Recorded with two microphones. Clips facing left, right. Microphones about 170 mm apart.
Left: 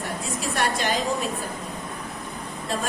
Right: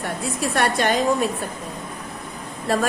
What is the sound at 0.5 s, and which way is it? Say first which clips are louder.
Speech: right 4 dB; 60° right (ahead or behind).